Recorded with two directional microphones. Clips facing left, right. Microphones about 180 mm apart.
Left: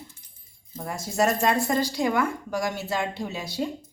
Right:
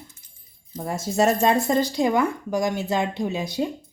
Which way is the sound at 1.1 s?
25° right (ahead or behind).